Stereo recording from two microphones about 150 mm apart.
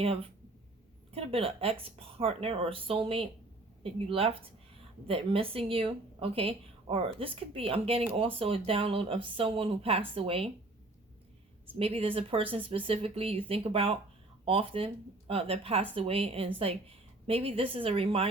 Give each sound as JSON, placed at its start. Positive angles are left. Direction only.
{"t": 0.0, "sound": "a woman's voice", "side_deg": -40}
{"t": 11.8, "sound": "a woman's voice", "side_deg": -40}